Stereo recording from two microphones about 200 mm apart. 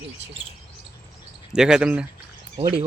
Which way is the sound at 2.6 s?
30° right (ahead or behind).